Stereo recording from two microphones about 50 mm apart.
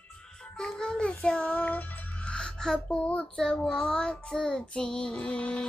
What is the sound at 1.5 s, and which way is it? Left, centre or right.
Music, left.